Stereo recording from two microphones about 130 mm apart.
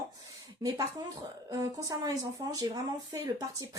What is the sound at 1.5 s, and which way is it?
Speech, 25° right (ahead or behind).